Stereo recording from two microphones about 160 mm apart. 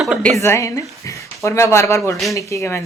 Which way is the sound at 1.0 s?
20° left (ahead or behind).